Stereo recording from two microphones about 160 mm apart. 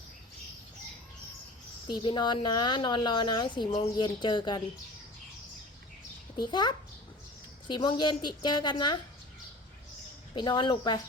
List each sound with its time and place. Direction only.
1.9 s a woman's voice: 30° left (ahead or behind)
6.4 s a woman's voice: 25° left (ahead or behind)
10.3 s a woman's voice: 30° left (ahead or behind)